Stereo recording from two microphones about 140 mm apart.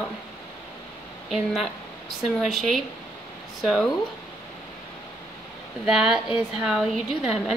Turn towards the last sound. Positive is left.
turn(degrees=0)  # may be behind; listen again after turning